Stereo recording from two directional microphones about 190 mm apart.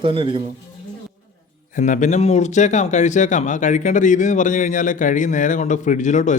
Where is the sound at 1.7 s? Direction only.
40° left (ahead or behind).